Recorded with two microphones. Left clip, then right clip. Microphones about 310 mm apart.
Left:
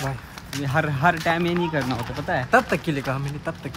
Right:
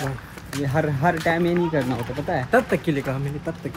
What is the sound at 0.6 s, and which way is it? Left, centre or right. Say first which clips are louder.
Speech: even; centre.